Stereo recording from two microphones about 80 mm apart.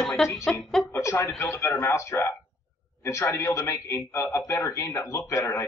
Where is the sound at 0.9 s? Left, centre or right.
Left.